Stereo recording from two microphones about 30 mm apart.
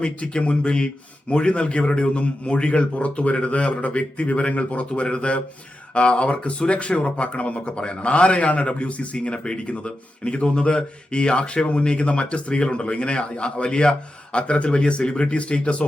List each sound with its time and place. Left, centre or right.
0.0 s a man's voice: left
5.0 s a man's voice: left
9.1 s speech: left
9.6 s a man's voice: left
9.8 s speech: left